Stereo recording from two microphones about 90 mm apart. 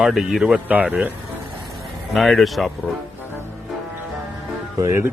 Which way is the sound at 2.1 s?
Centre (ahead or behind).